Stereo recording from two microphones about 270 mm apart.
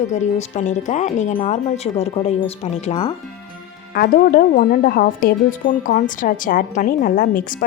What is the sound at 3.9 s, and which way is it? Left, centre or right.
A woman's voice, left.